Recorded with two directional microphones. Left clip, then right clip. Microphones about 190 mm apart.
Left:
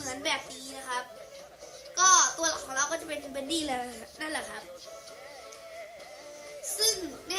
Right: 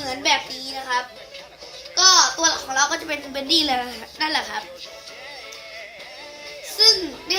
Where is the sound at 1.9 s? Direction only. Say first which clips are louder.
Right 6 dB; 25° left (ahead or behind).